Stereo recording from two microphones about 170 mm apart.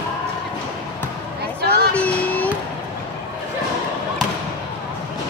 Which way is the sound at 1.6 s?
70° right (ahead or behind).